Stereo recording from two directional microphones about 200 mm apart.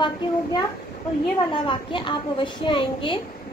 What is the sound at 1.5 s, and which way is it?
A child's voice, 25° left (ahead or behind).